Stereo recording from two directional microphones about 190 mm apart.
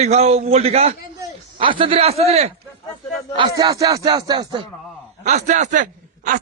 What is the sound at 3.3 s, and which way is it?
A man's voice, 20° right (ahead or behind).